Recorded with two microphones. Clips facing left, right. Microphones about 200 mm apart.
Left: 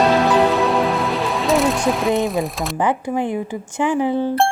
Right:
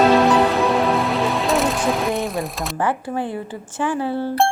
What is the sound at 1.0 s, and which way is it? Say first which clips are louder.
Sewing machine: even; centre (ahead or behind).